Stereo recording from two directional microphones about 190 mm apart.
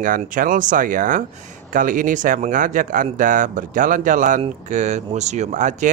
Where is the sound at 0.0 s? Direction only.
45° right (ahead or behind).